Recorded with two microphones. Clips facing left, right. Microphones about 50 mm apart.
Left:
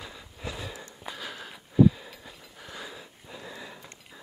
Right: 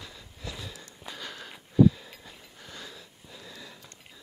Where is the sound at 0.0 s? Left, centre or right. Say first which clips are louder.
Left 3 dB; centre.